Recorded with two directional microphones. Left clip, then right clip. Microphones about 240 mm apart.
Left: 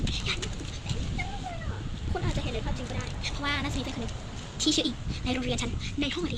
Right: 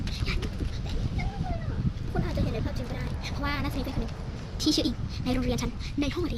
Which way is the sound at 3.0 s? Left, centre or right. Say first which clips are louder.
Left 3 dB; centre.